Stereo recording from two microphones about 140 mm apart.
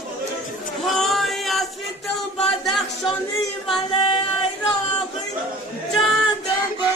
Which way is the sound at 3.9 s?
40° left (ahead or behind).